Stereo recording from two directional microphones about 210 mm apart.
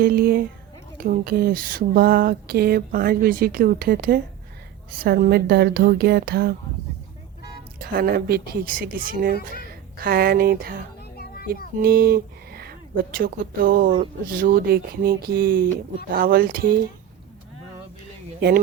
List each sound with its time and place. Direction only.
0.0 s speech: 45° right (ahead or behind)
7.8 s speech: 45° right (ahead or behind)
11.2 s a sound: 45° left (ahead or behind)
11.8 s speech: 45° right (ahead or behind)